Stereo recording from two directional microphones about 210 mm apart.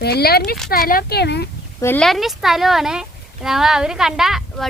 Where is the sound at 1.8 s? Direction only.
10° left (ahead or behind).